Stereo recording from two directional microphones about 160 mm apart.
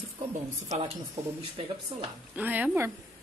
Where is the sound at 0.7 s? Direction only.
40° right (ahead or behind).